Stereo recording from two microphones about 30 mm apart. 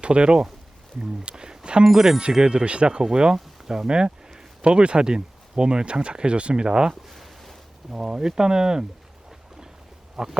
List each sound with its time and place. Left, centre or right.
0.0 s speech: right
1.2 s a sound: right
1.8 s speech: centre
2.4 s speech: right
3.3 s speech: centre
7.1 s a sound: centre
7.9 s speech: right
10.2 s speech: right